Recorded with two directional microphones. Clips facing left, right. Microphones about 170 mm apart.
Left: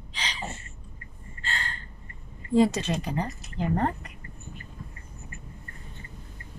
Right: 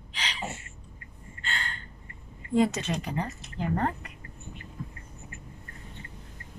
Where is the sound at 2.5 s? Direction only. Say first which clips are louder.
Left 3 dB; 35° left (ahead or behind).